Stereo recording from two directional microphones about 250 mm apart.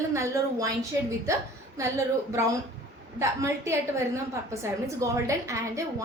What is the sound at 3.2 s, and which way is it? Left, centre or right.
A woman's voice, centre.